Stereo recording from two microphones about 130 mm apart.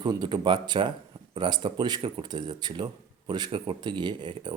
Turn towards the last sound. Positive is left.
turn(degrees=-35)  # may be behind; listen again after turning